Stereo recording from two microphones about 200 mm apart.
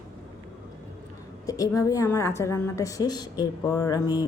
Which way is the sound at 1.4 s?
15° left (ahead or behind).